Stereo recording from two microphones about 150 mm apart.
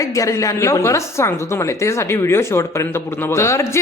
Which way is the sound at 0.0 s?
20° left (ahead or behind).